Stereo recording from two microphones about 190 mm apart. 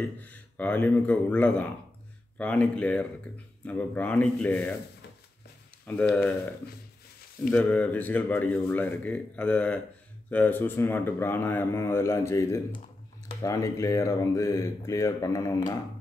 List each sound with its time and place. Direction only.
0.2 s speech: 10° left (ahead or behind)
5.9 s speech: 5° left (ahead or behind)